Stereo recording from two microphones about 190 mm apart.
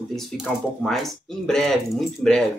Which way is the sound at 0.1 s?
Centre (ahead or behind).